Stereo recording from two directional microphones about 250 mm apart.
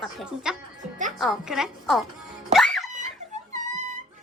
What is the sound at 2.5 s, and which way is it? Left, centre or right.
Music, centre.